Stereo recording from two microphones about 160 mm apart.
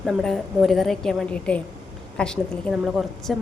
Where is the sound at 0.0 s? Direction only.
Centre (ahead or behind).